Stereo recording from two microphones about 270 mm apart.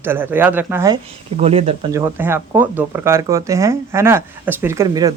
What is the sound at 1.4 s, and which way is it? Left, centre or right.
Speech, right.